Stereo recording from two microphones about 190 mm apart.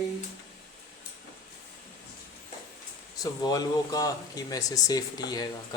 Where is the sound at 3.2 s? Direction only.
20° left (ahead or behind).